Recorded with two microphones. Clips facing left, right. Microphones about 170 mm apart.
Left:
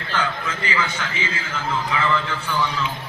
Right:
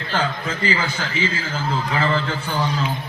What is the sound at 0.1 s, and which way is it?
A man's voice, 30° right (ahead or behind).